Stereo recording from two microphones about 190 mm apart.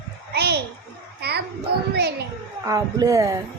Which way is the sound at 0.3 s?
60° right (ahead or behind).